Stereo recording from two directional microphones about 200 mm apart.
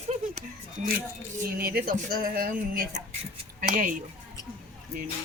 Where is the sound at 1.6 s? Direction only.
50° right (ahead or behind).